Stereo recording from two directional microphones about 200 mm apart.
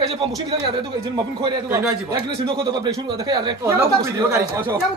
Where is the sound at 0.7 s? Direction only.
20° right (ahead or behind).